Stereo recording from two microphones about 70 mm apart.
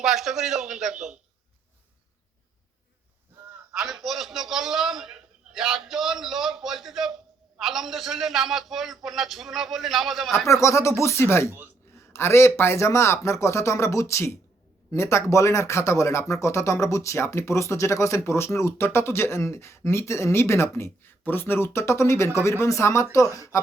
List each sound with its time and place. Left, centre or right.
0.0 s a man's voice: centre
3.8 s a man's voice: centre
10.4 s speech: left